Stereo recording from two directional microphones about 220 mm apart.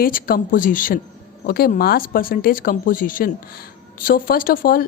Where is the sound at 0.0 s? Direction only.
40° left (ahead or behind).